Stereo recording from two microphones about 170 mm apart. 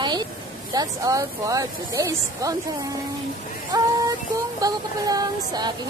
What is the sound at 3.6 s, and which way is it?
Child singing, 20° right (ahead or behind).